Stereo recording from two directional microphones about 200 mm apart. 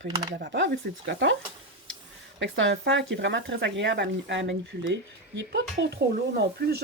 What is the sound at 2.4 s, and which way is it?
Speech, 65° right (ahead or behind).